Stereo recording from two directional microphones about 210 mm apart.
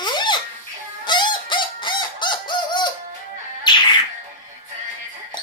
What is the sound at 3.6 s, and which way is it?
Music, 20° left (ahead or behind).